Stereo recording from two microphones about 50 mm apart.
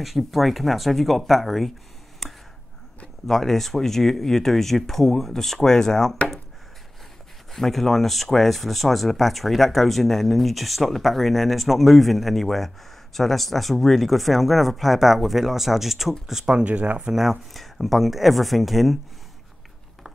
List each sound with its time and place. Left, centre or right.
0.0 s speech: centre
2.2 s a sound: centre
3.3 s speech: centre
7.5 s speech: centre
16.6 s speech: right
17.1 s speech: centre